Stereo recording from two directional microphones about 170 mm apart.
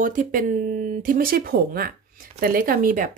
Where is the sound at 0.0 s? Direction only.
50° right (ahead or behind).